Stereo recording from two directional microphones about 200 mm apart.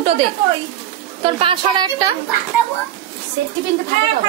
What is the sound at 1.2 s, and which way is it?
Speech, 25° right (ahead or behind).